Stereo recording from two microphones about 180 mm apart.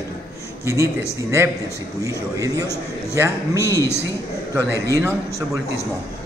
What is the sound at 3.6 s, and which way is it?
Speech, 15° left (ahead or behind).